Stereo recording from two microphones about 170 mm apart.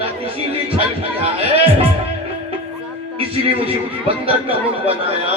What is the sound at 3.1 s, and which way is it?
Speech, 35° right (ahead or behind).